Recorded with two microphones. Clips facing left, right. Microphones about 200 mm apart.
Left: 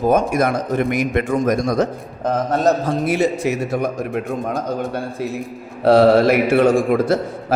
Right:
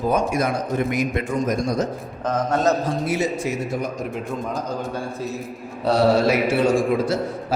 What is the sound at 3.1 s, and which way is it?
A man's voice, 65° left (ahead or behind).